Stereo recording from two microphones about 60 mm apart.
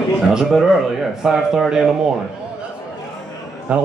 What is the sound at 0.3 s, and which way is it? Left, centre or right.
Speech, centre.